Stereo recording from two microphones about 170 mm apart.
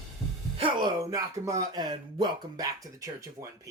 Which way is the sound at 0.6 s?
25° right (ahead or behind).